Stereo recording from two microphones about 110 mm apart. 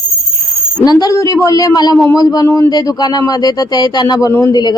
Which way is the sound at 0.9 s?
40° left (ahead or behind).